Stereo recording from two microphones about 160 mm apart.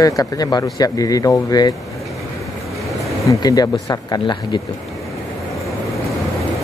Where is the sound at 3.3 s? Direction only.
25° left (ahead or behind).